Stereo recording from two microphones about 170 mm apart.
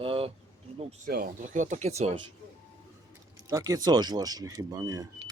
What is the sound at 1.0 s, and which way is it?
Speech, 60° right (ahead or behind).